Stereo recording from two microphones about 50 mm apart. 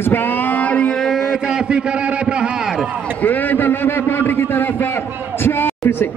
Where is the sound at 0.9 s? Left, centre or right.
Centre.